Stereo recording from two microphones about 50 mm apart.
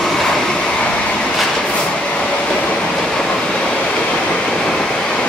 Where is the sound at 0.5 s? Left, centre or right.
Left.